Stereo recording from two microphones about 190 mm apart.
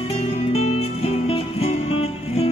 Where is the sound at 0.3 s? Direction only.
35° left (ahead or behind).